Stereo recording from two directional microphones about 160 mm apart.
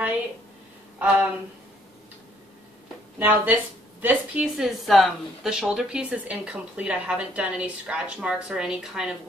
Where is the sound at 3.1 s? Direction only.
10° right (ahead or behind).